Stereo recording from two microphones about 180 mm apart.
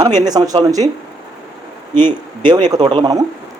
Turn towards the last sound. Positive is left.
turn(degrees=-25)  # may be behind; listen again after turning